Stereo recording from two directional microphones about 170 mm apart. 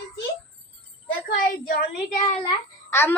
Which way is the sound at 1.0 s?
60° left (ahead or behind).